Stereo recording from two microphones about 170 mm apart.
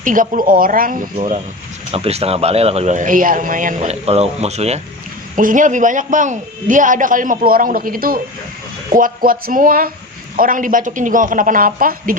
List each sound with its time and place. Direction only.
0.0 s a man's voice: 50° right (ahead or behind)
1.9 s a man's voice: 35° right (ahead or behind)
5.4 s a man's voice: 50° right (ahead or behind)